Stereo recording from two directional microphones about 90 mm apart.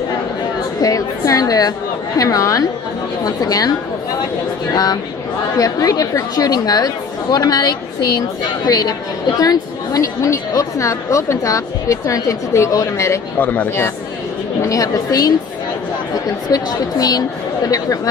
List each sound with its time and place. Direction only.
0.7 s a woman's voice: 40° left (ahead or behind)
5.6 s a woman's voice: 45° left (ahead or behind)
13.4 s speech: 20° left (ahead or behind)
14.6 s a woman's voice: 40° left (ahead or behind)
16.4 s a woman's voice: 45° left (ahead or behind)